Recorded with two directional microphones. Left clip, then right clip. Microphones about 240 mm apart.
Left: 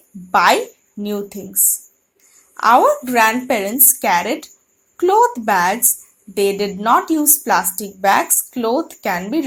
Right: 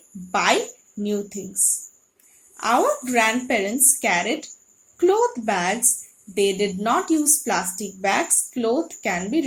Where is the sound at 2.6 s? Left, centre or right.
Left.